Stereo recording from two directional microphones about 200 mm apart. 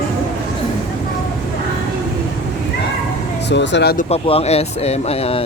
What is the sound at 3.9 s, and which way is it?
Speech, 30° left (ahead or behind).